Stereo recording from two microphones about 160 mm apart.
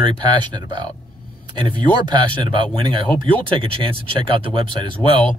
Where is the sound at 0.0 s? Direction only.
30° right (ahead or behind).